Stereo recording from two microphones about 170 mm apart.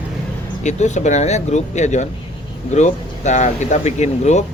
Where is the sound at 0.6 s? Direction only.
45° left (ahead or behind).